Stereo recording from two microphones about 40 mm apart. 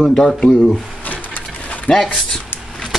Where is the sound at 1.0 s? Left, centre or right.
Left.